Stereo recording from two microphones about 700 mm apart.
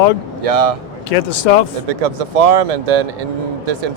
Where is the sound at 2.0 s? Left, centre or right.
Right.